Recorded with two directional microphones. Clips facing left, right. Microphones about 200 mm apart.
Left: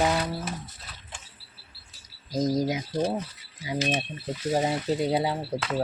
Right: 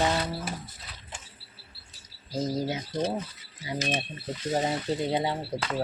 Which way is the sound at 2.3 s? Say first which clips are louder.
Left 4 dB; 15° left (ahead or behind).